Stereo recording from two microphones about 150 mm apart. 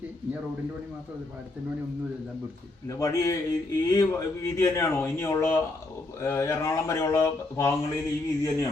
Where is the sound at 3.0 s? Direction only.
20° left (ahead or behind).